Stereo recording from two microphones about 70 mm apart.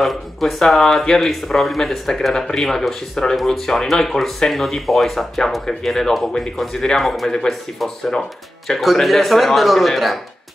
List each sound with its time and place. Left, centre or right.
0.0 s speech: centre